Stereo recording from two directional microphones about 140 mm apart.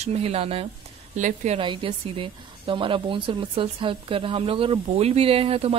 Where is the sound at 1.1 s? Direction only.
60° right (ahead or behind).